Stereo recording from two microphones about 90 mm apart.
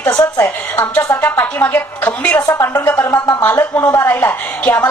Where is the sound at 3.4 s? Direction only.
25° left (ahead or behind).